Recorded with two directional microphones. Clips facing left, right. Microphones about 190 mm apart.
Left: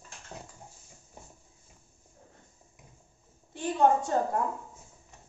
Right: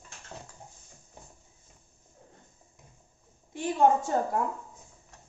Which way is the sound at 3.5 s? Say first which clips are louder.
Right 1 dB; 15° right (ahead or behind).